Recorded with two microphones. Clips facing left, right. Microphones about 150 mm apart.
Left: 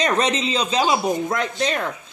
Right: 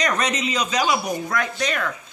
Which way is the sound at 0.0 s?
25° left (ahead or behind).